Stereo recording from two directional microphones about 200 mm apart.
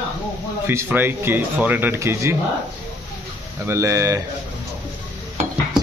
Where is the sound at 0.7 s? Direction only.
10° right (ahead or behind).